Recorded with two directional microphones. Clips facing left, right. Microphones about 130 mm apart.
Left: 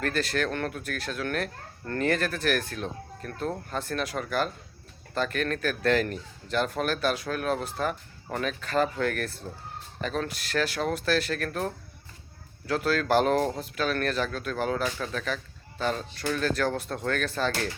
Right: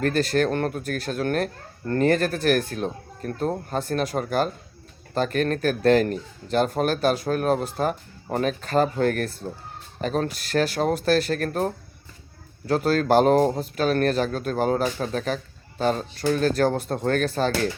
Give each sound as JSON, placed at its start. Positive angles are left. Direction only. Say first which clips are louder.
{"t": 0.0, "sound": "speech", "louder": "right 6 dB", "side_deg": -40}